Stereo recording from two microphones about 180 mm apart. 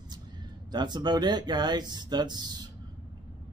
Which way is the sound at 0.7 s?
25° right (ahead or behind).